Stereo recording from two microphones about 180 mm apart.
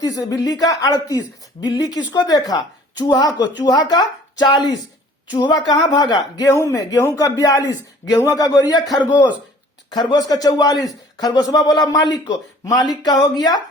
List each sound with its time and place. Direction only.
0.0 s speech: 20° left (ahead or behind)